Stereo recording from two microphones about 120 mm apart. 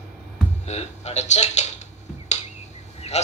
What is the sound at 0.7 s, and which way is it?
A man's voice, 65° left (ahead or behind).